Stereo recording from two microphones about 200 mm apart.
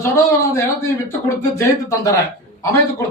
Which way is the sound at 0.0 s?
15° left (ahead or behind).